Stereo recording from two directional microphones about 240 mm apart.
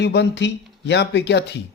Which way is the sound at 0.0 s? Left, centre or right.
Left.